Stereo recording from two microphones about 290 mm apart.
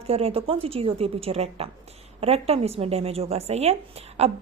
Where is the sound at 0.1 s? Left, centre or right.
Centre.